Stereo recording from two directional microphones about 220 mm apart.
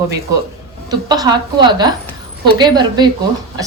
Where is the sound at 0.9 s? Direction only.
15° right (ahead or behind).